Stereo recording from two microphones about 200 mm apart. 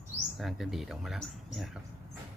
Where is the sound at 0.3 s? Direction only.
Centre (ahead or behind).